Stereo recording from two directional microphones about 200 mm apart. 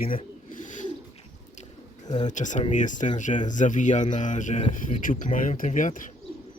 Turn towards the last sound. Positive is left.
turn(degrees=40)  # may be behind; listen again after turning